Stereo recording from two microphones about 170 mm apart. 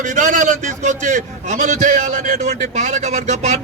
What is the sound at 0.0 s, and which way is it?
A man's voice, 50° right (ahead or behind).